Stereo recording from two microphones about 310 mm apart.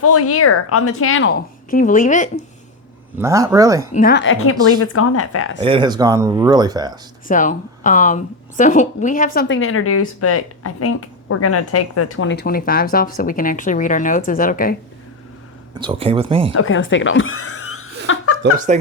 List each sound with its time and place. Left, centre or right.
0.0 s a woman's voice: left
3.2 s speech: centre
3.9 s a woman's voice: left
5.5 s speech: centre
7.3 s speech: left
9.6 s speech: left
15.8 s speech: centre
16.6 s chuckle: left
18.7 s speech: right